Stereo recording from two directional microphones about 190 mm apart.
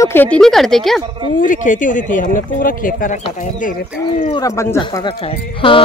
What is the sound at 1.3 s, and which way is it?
Speech, 45° left (ahead or behind).